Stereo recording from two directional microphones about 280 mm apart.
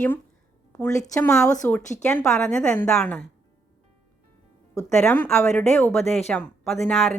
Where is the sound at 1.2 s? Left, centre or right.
Centre.